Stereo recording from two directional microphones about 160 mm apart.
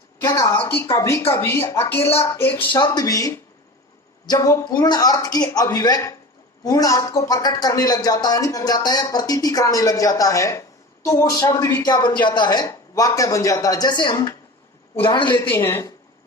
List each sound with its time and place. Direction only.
0.3 s a woman's voice: 20° left (ahead or behind)
2.6 s a woman's voice: 25° left (ahead or behind)
15.4 s a woman's voice: 15° left (ahead or behind)